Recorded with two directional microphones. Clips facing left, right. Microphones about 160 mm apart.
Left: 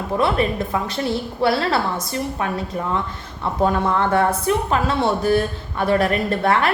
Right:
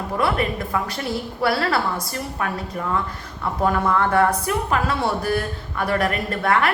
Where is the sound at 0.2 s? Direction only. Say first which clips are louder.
Left 2 dB; 25° left (ahead or behind).